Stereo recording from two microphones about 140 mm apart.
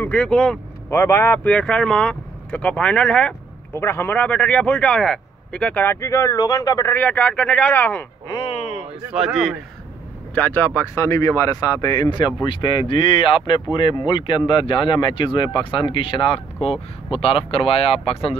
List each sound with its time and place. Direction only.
0.0 s speech: 10° left (ahead or behind)
0.8 s speech: 20° left (ahead or behind)
7.0 s speech: 10° left (ahead or behind)
8.3 s speech: 35° left (ahead or behind)
9.1 s speech: 5° right (ahead or behind)
10.3 s speech: 10° left (ahead or behind); by 18.3 s 40° left (ahead or behind)